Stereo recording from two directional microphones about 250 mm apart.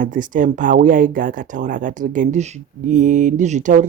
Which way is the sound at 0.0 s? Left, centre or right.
Right.